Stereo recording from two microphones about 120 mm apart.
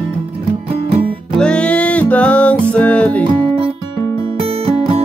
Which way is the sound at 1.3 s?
10° left (ahead or behind).